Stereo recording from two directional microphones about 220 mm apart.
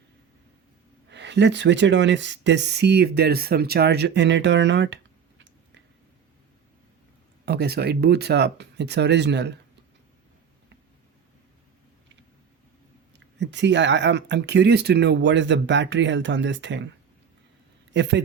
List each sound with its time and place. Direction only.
1.1 s speech: 55° right (ahead or behind)
7.4 s speech: 45° right (ahead or behind)
13.1 s speech: 55° right (ahead or behind)
17.9 s speech: 50° right (ahead or behind)